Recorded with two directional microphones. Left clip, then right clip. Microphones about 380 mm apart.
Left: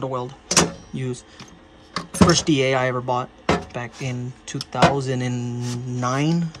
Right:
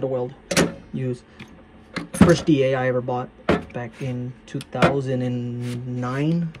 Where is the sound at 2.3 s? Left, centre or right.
Centre.